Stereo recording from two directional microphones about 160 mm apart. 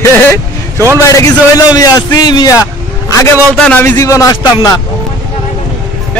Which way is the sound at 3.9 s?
20° left (ahead or behind).